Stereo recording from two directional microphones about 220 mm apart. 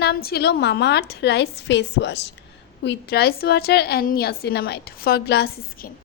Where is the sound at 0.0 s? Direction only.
45° left (ahead or behind).